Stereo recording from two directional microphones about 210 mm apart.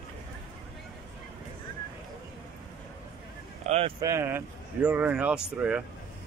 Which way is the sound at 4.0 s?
15° right (ahead or behind).